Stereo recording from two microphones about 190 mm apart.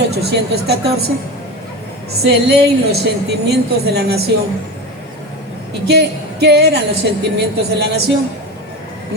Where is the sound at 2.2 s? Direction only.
60° right (ahead or behind).